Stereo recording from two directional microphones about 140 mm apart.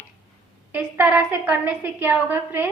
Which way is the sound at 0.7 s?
10° right (ahead or behind).